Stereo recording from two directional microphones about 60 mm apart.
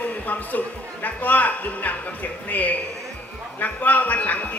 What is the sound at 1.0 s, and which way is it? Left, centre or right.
A man's voice, left.